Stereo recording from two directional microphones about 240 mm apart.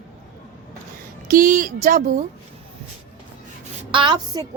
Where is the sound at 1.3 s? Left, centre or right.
Right.